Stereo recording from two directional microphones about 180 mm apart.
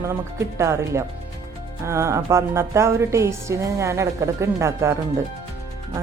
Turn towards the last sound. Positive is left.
turn(degrees=-15)  # may be behind; listen again after turning